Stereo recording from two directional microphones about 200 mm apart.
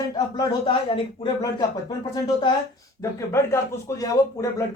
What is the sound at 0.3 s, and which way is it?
Speech, 20° left (ahead or behind).